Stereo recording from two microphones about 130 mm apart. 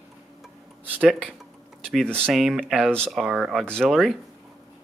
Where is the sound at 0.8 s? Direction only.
10° right (ahead or behind).